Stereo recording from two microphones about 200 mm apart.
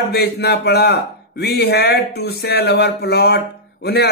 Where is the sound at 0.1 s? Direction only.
55° left (ahead or behind).